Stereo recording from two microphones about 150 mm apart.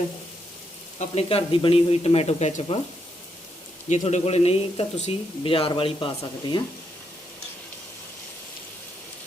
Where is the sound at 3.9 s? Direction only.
50° left (ahead or behind); by 6.6 s 30° left (ahead or behind).